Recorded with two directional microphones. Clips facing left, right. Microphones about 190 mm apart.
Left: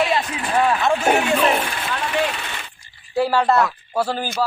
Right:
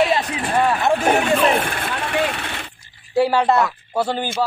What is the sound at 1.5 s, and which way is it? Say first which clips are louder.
Vehicle: right 1 dB; 50° right (ahead or behind).